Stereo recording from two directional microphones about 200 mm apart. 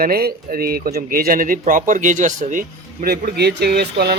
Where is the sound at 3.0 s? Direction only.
55° right (ahead or behind).